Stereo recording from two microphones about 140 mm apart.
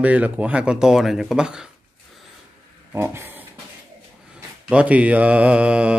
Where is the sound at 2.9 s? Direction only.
15° right (ahead or behind).